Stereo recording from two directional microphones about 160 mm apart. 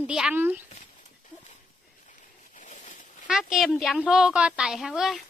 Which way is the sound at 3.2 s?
5° right (ahead or behind).